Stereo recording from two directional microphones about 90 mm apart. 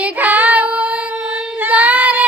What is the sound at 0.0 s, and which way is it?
Child singing, 20° right (ahead or behind).